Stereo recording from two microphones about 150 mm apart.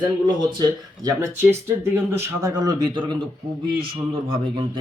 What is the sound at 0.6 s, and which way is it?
Speech, 25° right (ahead or behind).